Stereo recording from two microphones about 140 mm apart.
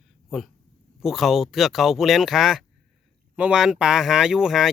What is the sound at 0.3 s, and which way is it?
Speech, centre (ahead or behind).